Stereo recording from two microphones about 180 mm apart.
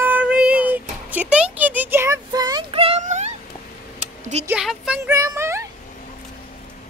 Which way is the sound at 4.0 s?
40° right (ahead or behind).